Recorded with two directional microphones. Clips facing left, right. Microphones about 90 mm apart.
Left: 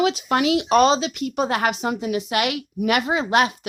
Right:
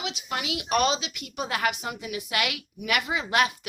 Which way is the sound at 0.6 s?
30° left (ahead or behind).